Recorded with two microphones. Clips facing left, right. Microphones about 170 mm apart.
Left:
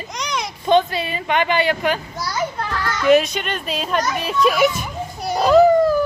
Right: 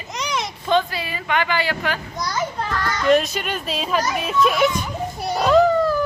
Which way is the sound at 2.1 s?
5° left (ahead or behind).